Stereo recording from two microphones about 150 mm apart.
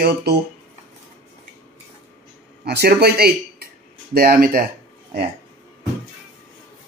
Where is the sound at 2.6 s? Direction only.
90° right.